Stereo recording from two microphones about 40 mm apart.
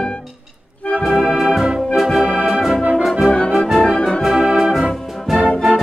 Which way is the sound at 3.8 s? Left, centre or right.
Centre.